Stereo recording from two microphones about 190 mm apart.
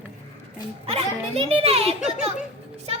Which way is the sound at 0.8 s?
30° right (ahead or behind).